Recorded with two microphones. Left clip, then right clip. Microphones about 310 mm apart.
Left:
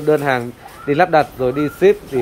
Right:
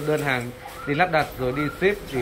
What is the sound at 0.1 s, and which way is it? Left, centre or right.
Speech, centre.